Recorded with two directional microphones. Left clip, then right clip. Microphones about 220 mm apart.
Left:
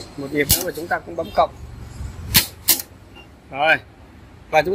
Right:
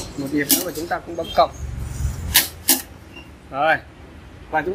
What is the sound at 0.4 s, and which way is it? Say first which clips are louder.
Speech: left 2 dB; 30° left (ahead or behind).